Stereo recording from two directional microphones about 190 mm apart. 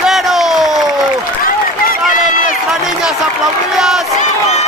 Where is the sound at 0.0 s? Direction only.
Centre (ahead or behind).